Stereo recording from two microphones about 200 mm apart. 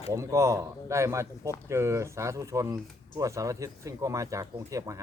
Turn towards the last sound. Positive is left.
turn(degrees=-15)  # may be behind; listen again after turning